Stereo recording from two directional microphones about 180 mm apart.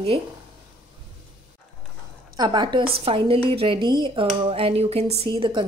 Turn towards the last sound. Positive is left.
turn(degrees=-25)  # may be behind; listen again after turning